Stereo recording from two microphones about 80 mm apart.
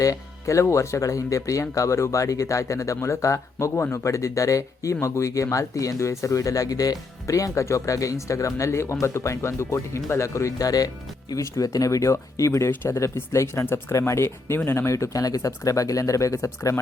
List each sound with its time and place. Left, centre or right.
0.0 s speech: left